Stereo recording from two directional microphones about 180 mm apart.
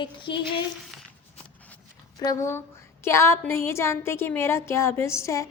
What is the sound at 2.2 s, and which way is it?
A woman's voice, 20° left (ahead or behind).